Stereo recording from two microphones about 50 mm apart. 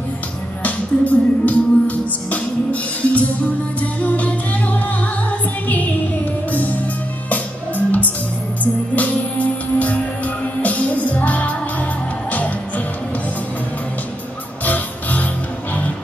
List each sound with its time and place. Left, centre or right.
0.7 s music: left
6.5 s music: left
14.6 s music: left